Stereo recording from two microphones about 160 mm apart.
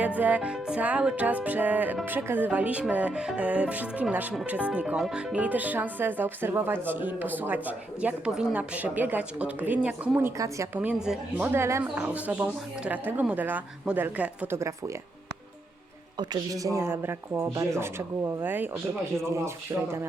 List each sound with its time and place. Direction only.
0.0 s music: 10° right (ahead or behind)
10.8 s music: 5° right (ahead or behind)
16.1 s music: 25° right (ahead or behind)